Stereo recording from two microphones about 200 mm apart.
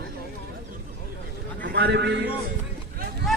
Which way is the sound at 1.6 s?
55° right (ahead or behind).